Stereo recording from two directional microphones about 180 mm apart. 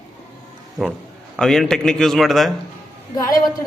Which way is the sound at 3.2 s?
20° left (ahead or behind).